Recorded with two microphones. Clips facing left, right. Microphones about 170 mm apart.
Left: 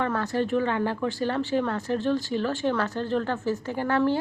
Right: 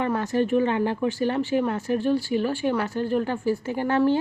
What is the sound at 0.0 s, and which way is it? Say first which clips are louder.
Speech: right 2 dB; 15° right (ahead or behind).